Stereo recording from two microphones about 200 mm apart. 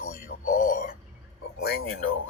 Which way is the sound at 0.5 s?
40° left (ahead or behind).